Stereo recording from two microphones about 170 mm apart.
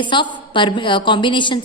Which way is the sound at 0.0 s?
30° left (ahead or behind).